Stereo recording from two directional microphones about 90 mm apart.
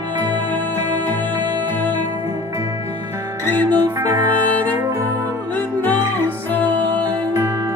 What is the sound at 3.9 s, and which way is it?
Music, 25° right (ahead or behind).